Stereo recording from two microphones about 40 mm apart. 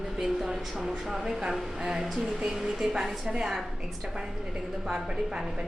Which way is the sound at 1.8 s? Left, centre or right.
Centre.